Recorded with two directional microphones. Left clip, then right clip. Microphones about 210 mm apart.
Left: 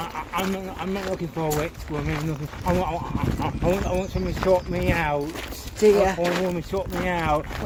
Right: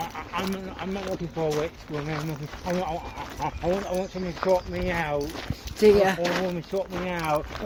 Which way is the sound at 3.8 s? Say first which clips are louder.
Left 3 dB; 50° left (ahead or behind).